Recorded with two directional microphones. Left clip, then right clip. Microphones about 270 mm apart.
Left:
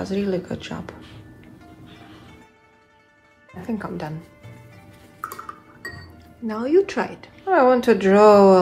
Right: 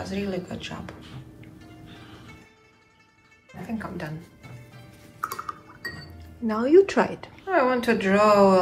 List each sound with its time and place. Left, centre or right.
0.1 s speech: centre
3.8 s speech: centre
5.2 s dishes: centre
6.4 s speech: centre
7.4 s speech: centre